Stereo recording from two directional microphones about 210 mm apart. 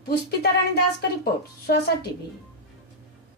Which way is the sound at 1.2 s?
50° left (ahead or behind).